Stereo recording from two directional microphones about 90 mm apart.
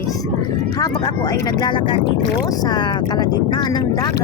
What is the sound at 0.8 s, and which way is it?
Speech, 50° left (ahead or behind).